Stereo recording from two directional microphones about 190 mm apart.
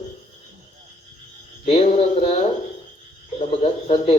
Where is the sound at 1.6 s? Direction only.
30° left (ahead or behind).